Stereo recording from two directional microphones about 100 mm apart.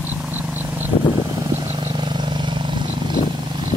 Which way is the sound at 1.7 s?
80° right.